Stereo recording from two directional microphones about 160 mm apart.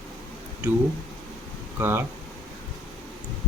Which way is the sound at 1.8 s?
15° right (ahead or behind).